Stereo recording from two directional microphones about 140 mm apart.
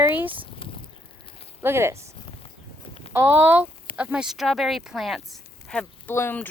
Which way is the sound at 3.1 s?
15° right (ahead or behind).